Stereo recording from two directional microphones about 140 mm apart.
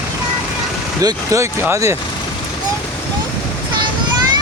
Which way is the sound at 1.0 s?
25° right (ahead or behind).